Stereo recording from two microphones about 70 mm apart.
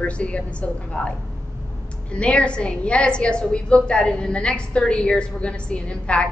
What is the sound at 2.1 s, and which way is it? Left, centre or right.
A woman's voice, centre.